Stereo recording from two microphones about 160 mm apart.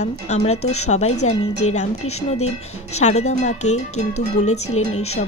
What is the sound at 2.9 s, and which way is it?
A woman's voice, 45° left (ahead or behind).